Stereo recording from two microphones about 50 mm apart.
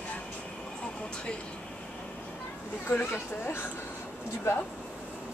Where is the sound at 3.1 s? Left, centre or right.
Left.